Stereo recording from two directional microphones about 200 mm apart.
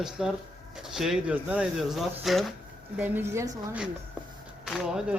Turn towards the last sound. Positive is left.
turn(degrees=-5)  # may be behind; listen again after turning